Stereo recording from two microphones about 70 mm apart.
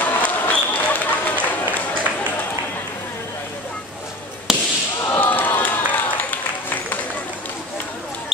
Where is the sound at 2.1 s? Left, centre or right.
Right.